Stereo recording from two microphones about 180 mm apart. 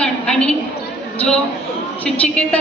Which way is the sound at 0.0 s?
5° left (ahead or behind).